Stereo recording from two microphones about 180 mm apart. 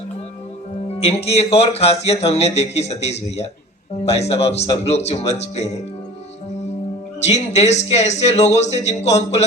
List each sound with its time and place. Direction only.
1.0 s a man's voice: 35° left (ahead or behind)
7.2 s a man's voice: 40° left (ahead or behind)